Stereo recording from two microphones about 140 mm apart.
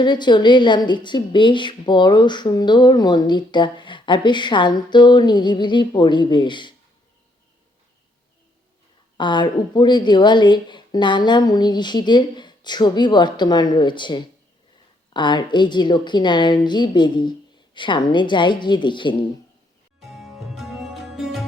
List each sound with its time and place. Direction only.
0.0 s a woman's voice: 30° left (ahead or behind)
9.1 s a woman's voice: 35° left (ahead or behind)
20.0 s sitar: centre (ahead or behind)